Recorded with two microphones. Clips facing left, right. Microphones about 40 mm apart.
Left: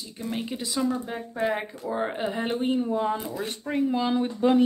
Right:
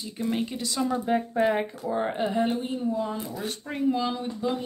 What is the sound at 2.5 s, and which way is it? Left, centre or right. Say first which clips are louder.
Speech: left 2 dB; left.